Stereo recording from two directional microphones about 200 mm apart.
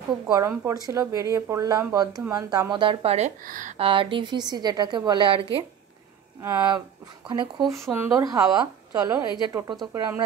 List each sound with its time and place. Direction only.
0.3 s a woman's voice: 15° right (ahead or behind)
7.2 s speech: 25° right (ahead or behind)
7.8 s a woman's voice: 10° right (ahead or behind)